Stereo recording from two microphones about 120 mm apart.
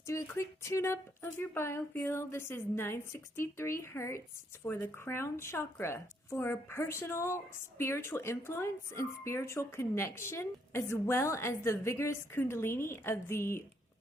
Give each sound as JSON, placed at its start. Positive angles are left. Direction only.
{"t": 0.0, "sound": "speech", "side_deg": 25}